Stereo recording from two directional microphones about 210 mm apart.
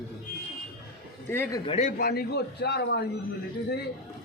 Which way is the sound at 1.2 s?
10° left (ahead or behind).